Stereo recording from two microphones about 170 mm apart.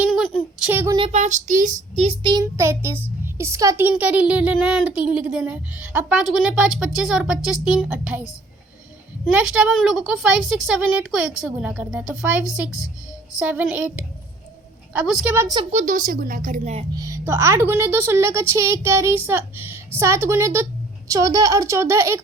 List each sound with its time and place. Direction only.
0.6 s speech: 10° right (ahead or behind)
0.9 s a woman's voice: 40° right (ahead or behind)
2.0 s speech: 30° right (ahead or behind)
2.4 s speech: 15° right (ahead or behind)
9.3 s a woman's voice: 5° right (ahead or behind)
15.7 s a woman's voice: 45° right (ahead or behind)
17.0 s speech: 15° right (ahead or behind)